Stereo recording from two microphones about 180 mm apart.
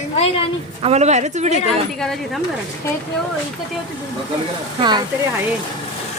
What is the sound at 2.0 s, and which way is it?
Speech, centre (ahead or behind).